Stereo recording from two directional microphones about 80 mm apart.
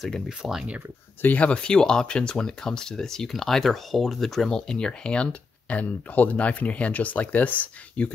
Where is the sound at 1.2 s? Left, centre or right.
Centre.